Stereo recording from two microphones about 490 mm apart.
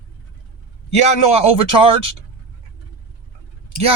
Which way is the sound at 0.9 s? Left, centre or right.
Left.